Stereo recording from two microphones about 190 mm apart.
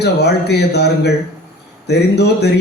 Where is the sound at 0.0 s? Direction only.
60° left (ahead or behind).